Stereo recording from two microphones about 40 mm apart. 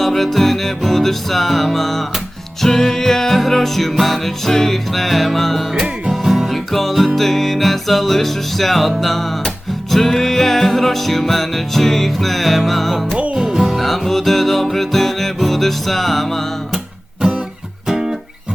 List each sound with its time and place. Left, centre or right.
0.0 s music: centre
13.3 s music: centre
13.7 s music: centre
17.8 s music: centre